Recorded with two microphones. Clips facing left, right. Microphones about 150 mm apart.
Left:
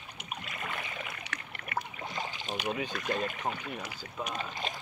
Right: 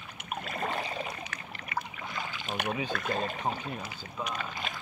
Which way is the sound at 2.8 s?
50° right (ahead or behind).